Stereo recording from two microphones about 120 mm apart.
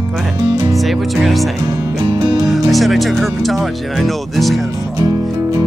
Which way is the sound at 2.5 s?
Centre (ahead or behind).